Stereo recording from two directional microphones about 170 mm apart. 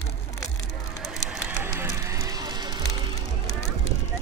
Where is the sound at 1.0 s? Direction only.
Centre (ahead or behind).